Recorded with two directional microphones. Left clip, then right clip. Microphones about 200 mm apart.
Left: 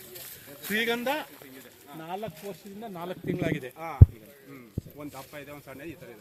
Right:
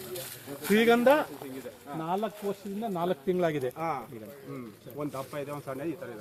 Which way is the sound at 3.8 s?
35° left (ahead or behind).